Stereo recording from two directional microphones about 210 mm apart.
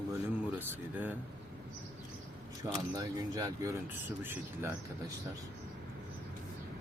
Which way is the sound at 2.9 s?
15° right (ahead or behind).